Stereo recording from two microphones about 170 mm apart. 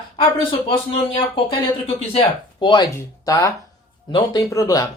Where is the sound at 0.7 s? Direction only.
30° left (ahead or behind).